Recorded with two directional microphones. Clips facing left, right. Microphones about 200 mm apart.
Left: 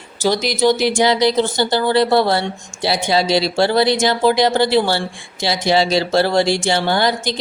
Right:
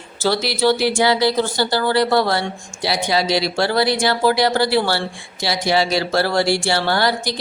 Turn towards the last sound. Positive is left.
turn(degrees=20)  # may be behind; listen again after turning